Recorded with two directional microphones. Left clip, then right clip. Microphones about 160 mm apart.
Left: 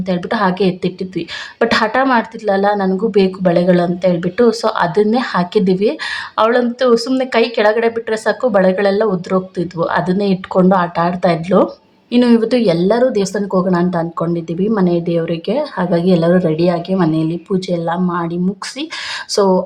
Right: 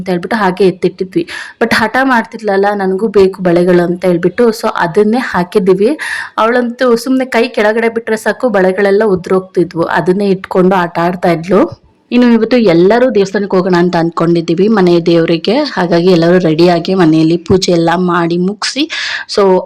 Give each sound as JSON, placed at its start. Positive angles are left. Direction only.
{"t": 0.1, "sound": "a woman's voice", "side_deg": -20}